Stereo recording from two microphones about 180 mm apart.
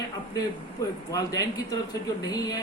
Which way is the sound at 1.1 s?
20° left (ahead or behind).